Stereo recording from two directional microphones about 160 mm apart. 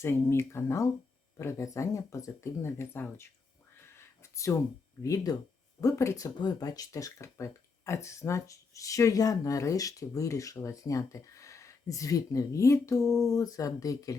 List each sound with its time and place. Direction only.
0.0 s speech: 15° left (ahead or behind)
3.8 s a sound: 15° left (ahead or behind)
5.0 s speech: 20° left (ahead or behind)